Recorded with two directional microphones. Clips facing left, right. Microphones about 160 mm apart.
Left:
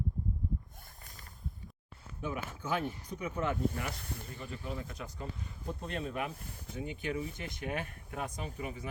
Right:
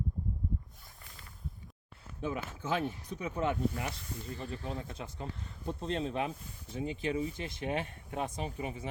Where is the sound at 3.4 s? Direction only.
20° right (ahead or behind).